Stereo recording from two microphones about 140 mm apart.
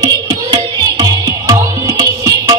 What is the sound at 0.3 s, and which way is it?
Music, 30° right (ahead or behind).